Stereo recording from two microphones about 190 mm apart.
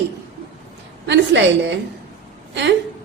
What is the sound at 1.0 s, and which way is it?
Speech, 70° right (ahead or behind).